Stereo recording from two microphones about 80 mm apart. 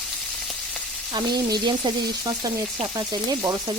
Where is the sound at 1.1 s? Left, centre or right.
Right.